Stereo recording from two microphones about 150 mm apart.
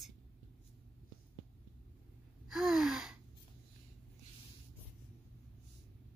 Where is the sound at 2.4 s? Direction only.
Centre (ahead or behind).